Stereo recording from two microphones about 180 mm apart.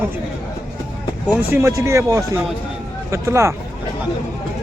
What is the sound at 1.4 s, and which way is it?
Speech, 15° right (ahead or behind).